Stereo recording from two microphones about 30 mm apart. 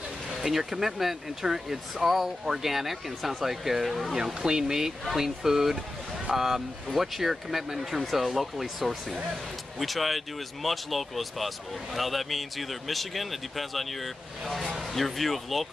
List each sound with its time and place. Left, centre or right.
0.4 s speech: centre
2.4 s speech: centre
4.2 s speech: right; by 15.7 s centre